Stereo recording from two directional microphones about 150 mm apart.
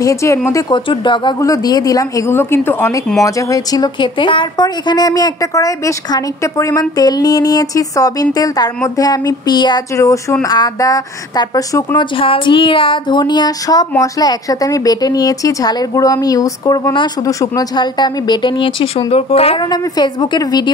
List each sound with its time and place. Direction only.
0.0 s speech: 20° left (ahead or behind)
12.2 s speech: 35° left (ahead or behind)